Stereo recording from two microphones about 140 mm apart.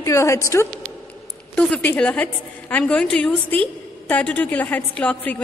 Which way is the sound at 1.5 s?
10° left (ahead or behind).